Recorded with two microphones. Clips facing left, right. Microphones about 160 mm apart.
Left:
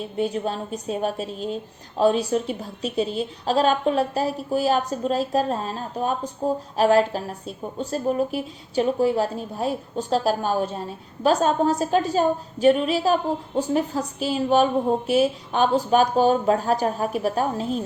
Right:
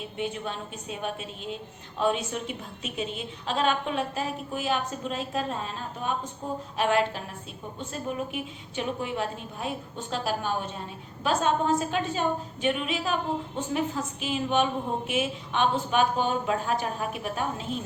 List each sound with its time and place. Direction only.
0.0 s a woman's voice: 40° left (ahead or behind)